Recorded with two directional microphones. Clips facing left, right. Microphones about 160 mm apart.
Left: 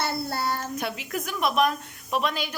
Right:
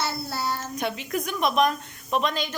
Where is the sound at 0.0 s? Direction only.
55° left (ahead or behind).